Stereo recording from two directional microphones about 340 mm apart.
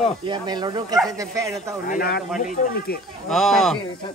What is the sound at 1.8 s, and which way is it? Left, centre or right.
Speech, left.